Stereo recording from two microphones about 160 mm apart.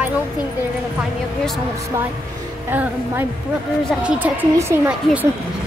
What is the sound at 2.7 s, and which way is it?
Speech, 10° right (ahead or behind).